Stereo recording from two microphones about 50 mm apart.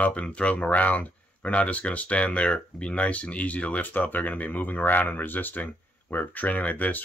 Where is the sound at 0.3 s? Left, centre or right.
Left.